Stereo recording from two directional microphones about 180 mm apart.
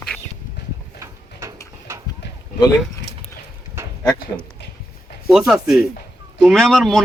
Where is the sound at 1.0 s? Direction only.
15° right (ahead or behind).